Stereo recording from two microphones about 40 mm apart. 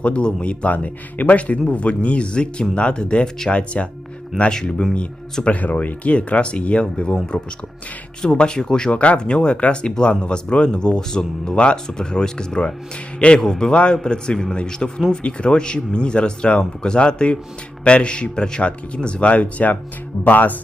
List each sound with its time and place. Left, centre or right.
0.0 s speech: left
0.7 s speech: left
4.9 s speech: left
8.3 s speech: left
8.9 s speech: left
20.2 s speech: left